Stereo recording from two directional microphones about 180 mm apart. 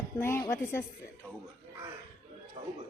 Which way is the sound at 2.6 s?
30° right (ahead or behind).